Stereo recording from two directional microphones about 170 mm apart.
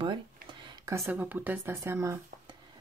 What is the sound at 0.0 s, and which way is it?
Speech, 25° right (ahead or behind).